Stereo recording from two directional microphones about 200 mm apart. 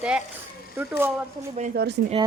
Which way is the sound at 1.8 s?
55° right (ahead or behind).